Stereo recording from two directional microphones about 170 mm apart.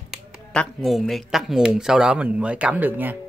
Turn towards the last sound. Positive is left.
turn(degrees=-10)  # may be behind; listen again after turning